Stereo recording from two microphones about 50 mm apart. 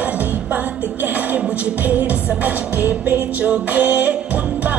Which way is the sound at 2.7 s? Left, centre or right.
Right.